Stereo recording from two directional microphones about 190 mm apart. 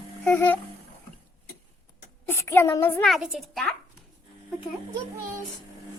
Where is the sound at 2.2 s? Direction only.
10° left (ahead or behind).